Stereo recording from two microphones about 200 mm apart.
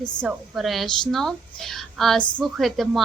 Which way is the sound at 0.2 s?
Centre (ahead or behind).